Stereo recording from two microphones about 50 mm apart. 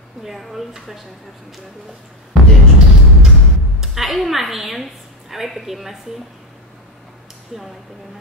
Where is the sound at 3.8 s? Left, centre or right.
Centre.